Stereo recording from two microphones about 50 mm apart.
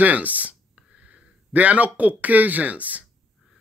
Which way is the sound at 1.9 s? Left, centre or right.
Right.